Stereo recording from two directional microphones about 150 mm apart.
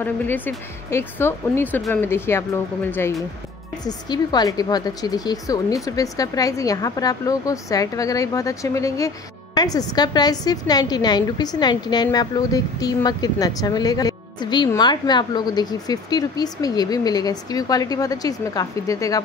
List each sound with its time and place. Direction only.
0.0 s speech: 15° left (ahead or behind)
3.8 s a woman's voice: 25° left (ahead or behind)